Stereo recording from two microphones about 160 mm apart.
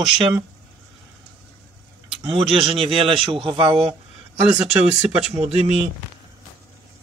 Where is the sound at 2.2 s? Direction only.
35° right (ahead or behind).